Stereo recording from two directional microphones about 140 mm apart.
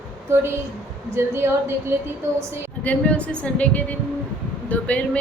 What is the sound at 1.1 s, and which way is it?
Speech, 20° right (ahead or behind).